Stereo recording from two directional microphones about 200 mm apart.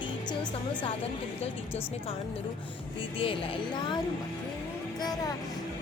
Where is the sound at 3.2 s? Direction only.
25° left (ahead or behind).